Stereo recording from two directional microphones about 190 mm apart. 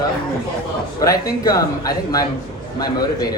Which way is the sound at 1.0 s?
20° left (ahead or behind).